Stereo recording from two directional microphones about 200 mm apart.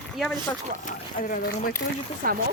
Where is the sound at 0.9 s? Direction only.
45° left (ahead or behind).